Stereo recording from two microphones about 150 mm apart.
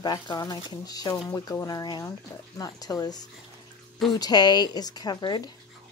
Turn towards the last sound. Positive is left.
turn(degrees=30)  # may be behind; listen again after turning